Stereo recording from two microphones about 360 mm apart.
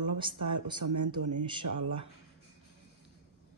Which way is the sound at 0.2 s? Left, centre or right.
Centre.